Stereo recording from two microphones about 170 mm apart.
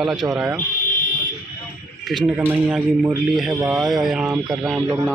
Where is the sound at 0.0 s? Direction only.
5° right (ahead or behind).